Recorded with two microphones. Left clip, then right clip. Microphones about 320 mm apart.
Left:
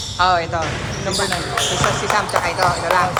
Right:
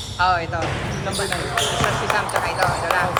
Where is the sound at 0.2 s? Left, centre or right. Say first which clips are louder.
Left 3 dB; centre.